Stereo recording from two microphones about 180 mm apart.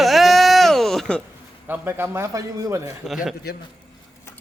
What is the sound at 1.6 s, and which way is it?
A man's voice, 10° right (ahead or behind).